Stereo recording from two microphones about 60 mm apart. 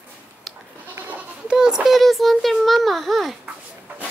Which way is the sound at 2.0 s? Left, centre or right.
Centre.